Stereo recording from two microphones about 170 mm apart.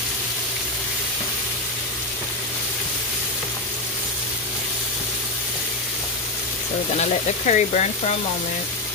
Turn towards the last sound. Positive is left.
turn(degrees=40)  # may be behind; listen again after turning